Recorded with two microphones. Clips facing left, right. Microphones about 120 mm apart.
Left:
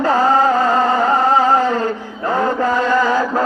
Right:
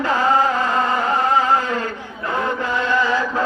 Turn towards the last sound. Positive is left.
turn(degrees=40)  # may be behind; listen again after turning